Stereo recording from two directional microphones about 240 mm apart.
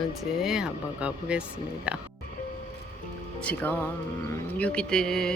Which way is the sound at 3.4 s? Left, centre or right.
Centre.